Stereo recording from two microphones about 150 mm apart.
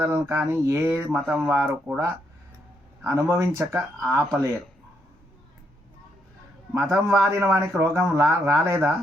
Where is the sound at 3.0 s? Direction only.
20° right (ahead or behind).